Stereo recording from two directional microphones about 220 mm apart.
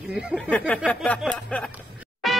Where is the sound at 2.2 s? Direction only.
Centre (ahead or behind).